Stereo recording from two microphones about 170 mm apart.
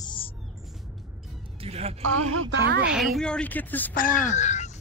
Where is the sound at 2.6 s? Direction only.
80° right.